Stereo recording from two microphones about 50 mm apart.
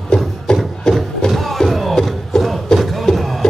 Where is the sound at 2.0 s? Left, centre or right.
Centre.